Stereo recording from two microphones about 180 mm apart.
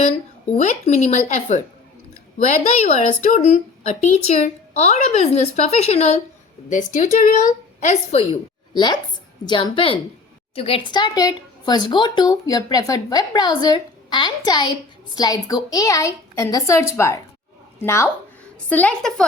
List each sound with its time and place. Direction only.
0.5 s a woman's voice: 40° left (ahead or behind); by 19.2 s 5° left (ahead or behind)